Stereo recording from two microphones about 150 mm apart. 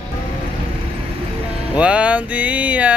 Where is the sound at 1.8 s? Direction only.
10° right (ahead or behind).